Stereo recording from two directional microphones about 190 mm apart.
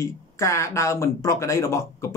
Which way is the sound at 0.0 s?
15° left (ahead or behind).